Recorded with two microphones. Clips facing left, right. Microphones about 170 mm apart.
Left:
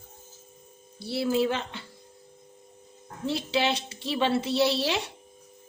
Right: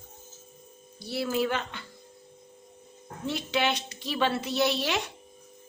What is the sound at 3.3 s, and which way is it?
A woman's voice, 30° left (ahead or behind).